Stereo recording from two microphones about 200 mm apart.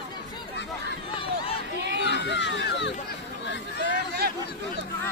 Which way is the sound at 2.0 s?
60° left (ahead or behind).